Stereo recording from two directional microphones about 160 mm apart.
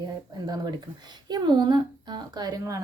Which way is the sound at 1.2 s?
25° right (ahead or behind).